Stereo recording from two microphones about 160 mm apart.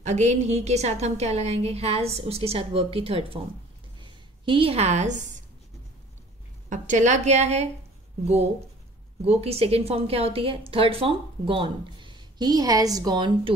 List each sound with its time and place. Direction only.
0.0 s a woman's voice: 45° right (ahead or behind)
4.0 s a sound: 30° right (ahead or behind); by 5.4 s 50° right (ahead or behind)
6.7 s a woman's voice: 50° right (ahead or behind)
9.2 s a woman's voice: 40° right (ahead or behind)